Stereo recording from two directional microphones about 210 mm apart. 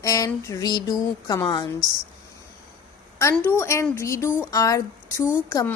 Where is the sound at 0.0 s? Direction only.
15° left (ahead or behind).